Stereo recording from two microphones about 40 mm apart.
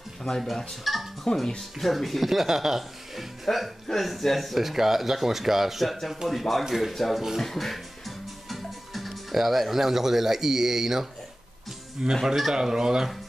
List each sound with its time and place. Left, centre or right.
0.4 s speech: centre
1.3 s speech: left
1.8 s speech: centre